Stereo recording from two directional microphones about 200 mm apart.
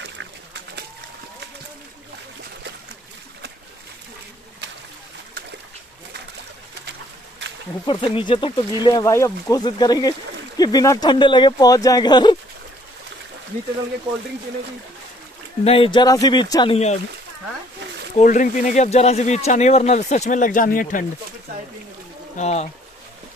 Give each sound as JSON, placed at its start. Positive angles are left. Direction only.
{"t": 7.8, "sound": "speech", "side_deg": 30}
{"t": 15.6, "sound": "speech", "side_deg": 30}
{"t": 16.7, "sound": "speech", "side_deg": 35}
{"t": 18.1, "sound": "speech", "side_deg": 40}
{"t": 22.4, "sound": "speech", "side_deg": 35}